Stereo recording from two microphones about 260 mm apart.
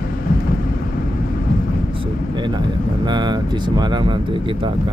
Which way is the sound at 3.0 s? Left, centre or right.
Centre.